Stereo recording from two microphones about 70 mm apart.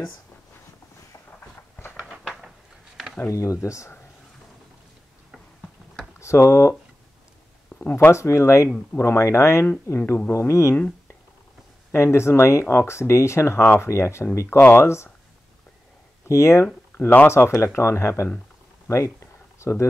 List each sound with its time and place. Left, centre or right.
3.3 s speech: left
6.1 s speech: left
7.9 s speech: left
11.9 s speech: left
16.3 s speech: left
18.9 s a sound: left